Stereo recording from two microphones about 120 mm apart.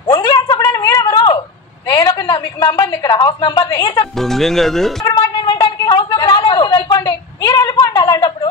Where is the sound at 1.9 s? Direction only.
35° left (ahead or behind).